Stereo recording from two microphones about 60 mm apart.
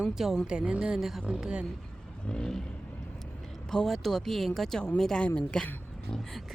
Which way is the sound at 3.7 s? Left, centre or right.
Centre.